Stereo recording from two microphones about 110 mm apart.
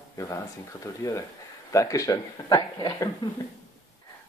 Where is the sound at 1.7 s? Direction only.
30° left (ahead or behind).